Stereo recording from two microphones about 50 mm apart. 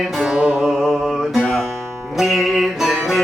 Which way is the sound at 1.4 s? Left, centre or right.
Centre.